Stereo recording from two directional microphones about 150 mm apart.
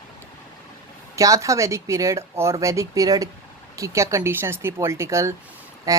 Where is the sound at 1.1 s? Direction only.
20° right (ahead or behind).